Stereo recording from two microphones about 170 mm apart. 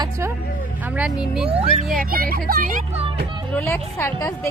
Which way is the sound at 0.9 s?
5° right (ahead or behind).